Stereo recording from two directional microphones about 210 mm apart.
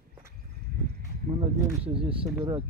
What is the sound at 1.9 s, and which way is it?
Speech, 25° right (ahead or behind).